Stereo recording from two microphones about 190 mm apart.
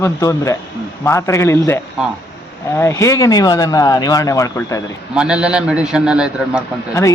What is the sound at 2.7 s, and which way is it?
Speech, 15° left (ahead or behind).